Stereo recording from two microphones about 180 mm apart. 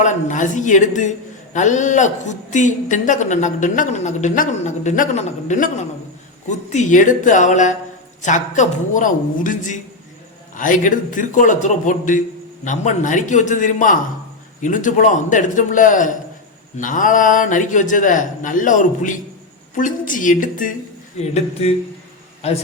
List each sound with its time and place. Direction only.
0.0 s a man's voice: 45° left (ahead or behind)
21.2 s speech: 35° left (ahead or behind)